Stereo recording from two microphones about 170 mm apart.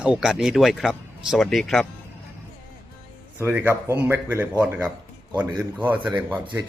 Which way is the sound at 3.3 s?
10° right (ahead or behind).